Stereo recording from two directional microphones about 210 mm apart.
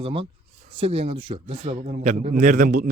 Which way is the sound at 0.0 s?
25° right (ahead or behind).